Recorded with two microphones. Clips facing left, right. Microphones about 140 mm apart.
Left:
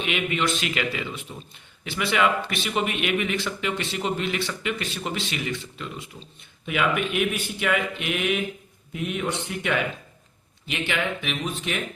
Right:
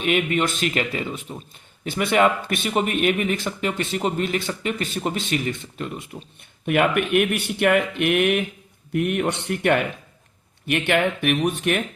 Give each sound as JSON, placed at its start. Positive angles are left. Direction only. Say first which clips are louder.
{"t": 0.0, "sound": "a man's voice", "louder": "right 4 dB", "side_deg": -45}
{"t": 6.7, "sound": "speech", "louder": "right 5 dB", "side_deg": -60}